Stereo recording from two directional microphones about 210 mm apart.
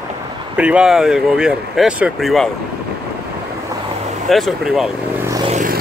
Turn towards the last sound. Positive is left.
turn(degrees=-40)  # may be behind; listen again after turning